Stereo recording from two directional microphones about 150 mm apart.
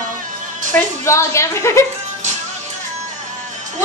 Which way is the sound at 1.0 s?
20° left (ahead or behind).